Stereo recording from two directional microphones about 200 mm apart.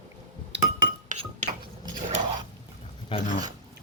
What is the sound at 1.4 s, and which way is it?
Dishes, 35° right (ahead or behind).